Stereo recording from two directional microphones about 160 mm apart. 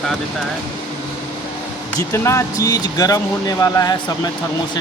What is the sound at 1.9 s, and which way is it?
Speech, 15° left (ahead or behind).